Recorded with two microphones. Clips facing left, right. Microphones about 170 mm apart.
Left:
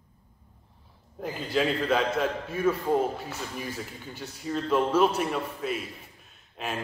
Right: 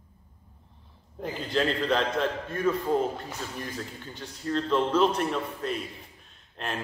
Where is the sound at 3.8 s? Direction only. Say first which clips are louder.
Even; 10° left (ahead or behind).